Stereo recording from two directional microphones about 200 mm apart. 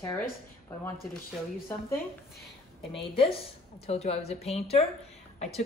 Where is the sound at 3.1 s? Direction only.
30° left (ahead or behind).